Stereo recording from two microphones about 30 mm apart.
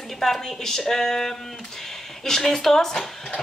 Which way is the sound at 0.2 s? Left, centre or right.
Centre.